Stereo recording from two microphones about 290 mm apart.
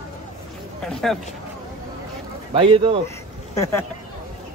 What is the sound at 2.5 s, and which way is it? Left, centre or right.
Speech, centre.